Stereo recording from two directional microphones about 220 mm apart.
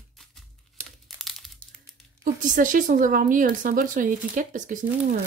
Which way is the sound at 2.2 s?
35° right (ahead or behind).